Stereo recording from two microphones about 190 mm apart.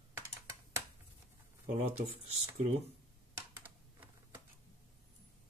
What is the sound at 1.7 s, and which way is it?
Speech, 35° right (ahead or behind).